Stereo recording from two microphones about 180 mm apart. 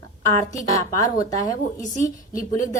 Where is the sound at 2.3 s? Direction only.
45° left (ahead or behind).